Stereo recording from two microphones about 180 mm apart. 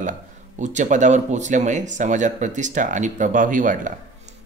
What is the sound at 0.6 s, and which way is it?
Speech, 40° right (ahead or behind).